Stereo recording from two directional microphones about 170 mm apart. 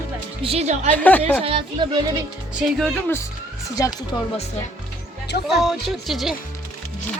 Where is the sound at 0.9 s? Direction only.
10° left (ahead or behind).